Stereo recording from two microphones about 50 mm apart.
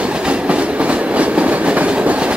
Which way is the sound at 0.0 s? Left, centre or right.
Right.